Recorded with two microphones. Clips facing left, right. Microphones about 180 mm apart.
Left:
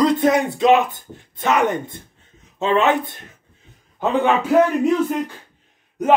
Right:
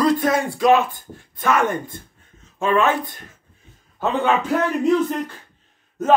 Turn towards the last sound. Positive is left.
turn(degrees=15)  # may be behind; listen again after turning